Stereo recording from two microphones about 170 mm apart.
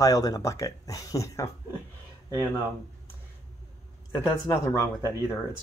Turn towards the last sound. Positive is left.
turn(degrees=15)  # may be behind; listen again after turning